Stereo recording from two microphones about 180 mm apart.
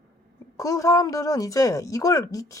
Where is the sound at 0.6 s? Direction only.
20° left (ahead or behind).